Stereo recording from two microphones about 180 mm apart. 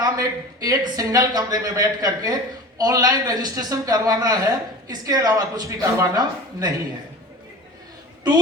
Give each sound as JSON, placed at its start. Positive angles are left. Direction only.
{"t": 0.0, "sound": "speech", "side_deg": -20}